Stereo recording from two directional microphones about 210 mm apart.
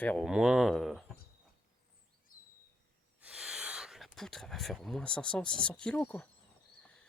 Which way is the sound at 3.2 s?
5° right (ahead or behind).